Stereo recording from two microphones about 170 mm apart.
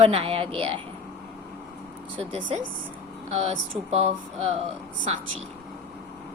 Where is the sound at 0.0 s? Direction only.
35° right (ahead or behind).